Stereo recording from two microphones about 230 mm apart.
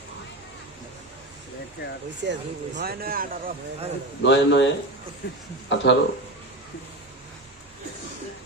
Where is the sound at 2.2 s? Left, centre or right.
Right.